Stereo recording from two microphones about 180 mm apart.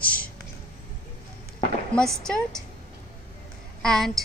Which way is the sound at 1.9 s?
5° left (ahead or behind).